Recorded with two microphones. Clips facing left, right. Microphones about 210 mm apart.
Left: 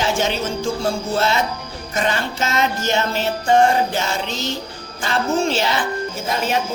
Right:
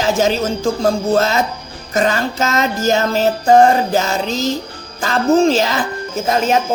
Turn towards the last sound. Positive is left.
turn(degrees=-45)  # may be behind; listen again after turning